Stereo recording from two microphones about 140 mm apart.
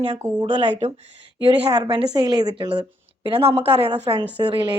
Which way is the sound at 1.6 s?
30° right (ahead or behind).